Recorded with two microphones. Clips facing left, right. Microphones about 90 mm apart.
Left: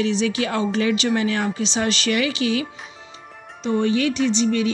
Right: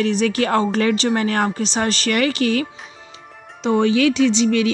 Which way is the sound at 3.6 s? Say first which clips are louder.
Right 4 dB; 90° right.